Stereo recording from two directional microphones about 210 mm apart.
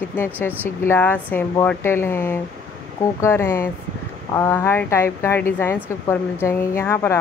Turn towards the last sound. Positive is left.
turn(degrees=10)  # may be behind; listen again after turning